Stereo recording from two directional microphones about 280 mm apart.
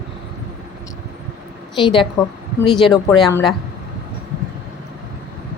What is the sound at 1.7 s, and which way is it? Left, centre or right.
Speech, centre.